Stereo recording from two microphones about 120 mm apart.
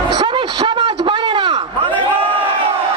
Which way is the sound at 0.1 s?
40° right (ahead or behind).